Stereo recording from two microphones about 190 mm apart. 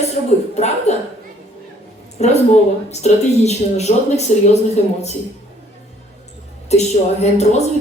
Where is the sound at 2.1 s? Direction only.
35° left (ahead or behind).